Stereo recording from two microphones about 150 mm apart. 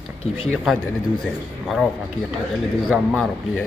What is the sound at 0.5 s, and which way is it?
A man's voice, 5° left (ahead or behind).